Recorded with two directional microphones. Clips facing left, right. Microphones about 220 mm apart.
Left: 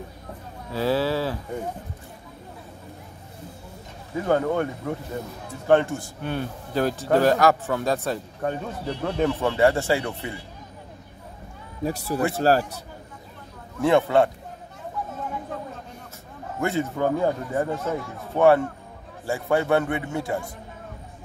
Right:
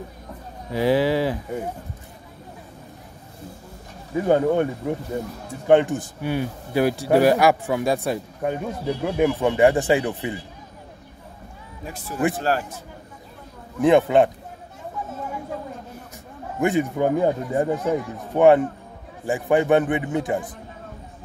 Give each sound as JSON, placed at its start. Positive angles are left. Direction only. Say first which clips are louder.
{"t": 0.7, "sound": "a man's voice", "louder": "right 4 dB", "side_deg": -15}
{"t": 4.2, "sound": "a man's voice", "louder": "right 4 dB", "side_deg": -20}
{"t": 11.8, "sound": "speech", "louder": "even", "side_deg": 35}
{"t": 13.7, "sound": "a man's voice", "louder": "right 3 dB", "side_deg": -15}
{"t": 16.5, "sound": "a man's voice", "louder": "right 4 dB", "side_deg": -15}